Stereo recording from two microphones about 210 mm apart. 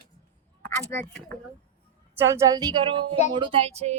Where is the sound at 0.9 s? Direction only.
5° left (ahead or behind).